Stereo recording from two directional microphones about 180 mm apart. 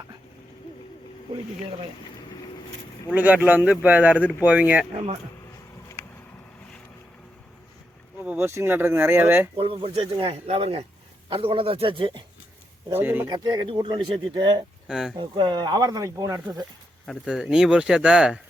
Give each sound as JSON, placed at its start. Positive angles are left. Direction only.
{"t": 3.1, "sound": "speech", "side_deg": -10}
{"t": 8.2, "sound": "speech", "side_deg": -10}
{"t": 9.6, "sound": "speech", "side_deg": -30}
{"t": 12.9, "sound": "speech", "side_deg": -10}
{"t": 13.2, "sound": "speech", "side_deg": -25}
{"t": 14.8, "sound": "speech", "side_deg": 0}
{"t": 15.2, "sound": "speech", "side_deg": -25}
{"t": 17.1, "sound": "speech", "side_deg": 0}